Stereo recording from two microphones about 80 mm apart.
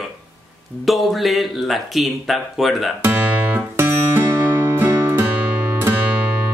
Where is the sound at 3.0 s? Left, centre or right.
Right.